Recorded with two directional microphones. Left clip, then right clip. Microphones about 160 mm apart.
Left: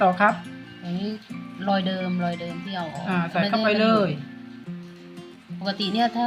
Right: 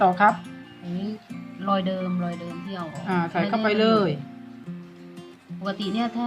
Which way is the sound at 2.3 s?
Centre (ahead or behind).